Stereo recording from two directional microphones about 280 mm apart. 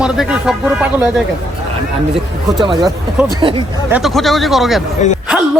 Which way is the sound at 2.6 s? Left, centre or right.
Centre.